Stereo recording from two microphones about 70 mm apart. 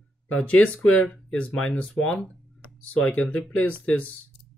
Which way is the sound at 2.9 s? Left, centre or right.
Centre.